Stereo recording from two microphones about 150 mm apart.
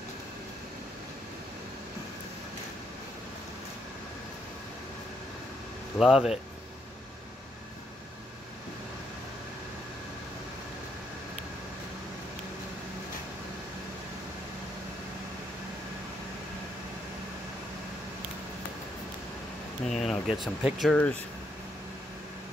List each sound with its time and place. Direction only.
5.9 s speech: centre (ahead or behind)
19.9 s a sound: centre (ahead or behind)
20.6 s speech: centre (ahead or behind)